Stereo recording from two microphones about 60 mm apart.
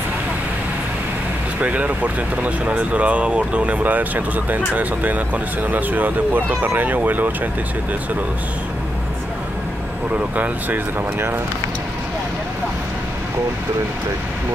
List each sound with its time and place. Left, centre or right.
1.6 s speech: right
10.1 s speech: right